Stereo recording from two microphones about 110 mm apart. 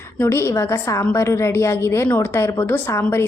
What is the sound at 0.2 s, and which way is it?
A woman's voice, 25° left (ahead or behind).